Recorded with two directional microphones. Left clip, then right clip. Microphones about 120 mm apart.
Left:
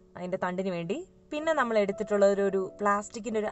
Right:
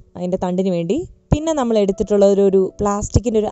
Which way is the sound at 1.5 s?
90° right.